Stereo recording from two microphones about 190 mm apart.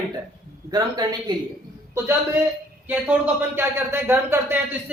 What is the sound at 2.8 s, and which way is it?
Speech, 10° right (ahead or behind).